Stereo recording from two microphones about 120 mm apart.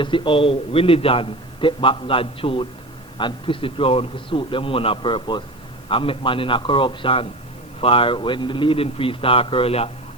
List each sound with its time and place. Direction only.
0.0 s a man's voice: 45° left (ahead or behind)